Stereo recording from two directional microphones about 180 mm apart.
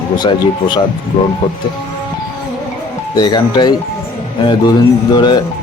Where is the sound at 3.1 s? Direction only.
25° left (ahead or behind).